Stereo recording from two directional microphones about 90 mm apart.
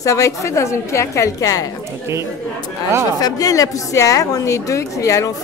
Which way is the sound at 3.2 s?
40° left (ahead or behind).